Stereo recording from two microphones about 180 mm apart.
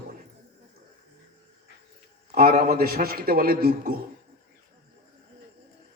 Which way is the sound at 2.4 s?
55° right (ahead or behind).